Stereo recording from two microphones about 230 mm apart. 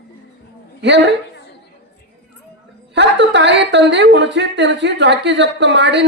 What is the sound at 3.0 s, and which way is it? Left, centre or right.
A woman's voice, right.